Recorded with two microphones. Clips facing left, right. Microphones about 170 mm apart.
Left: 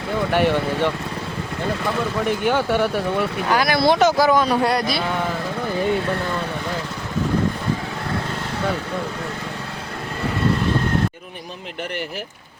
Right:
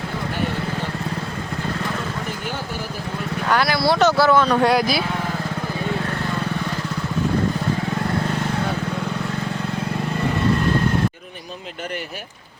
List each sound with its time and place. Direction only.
2.5 s speech: 70° left (ahead or behind)
3.5 s speech: 20° left (ahead or behind)
4.6 s speech: centre (ahead or behind)